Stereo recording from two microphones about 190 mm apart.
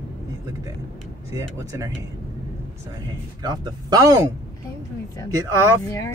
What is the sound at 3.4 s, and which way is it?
Speech, 20° right (ahead or behind).